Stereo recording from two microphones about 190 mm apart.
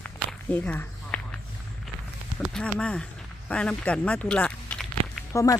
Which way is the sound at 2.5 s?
5° left (ahead or behind).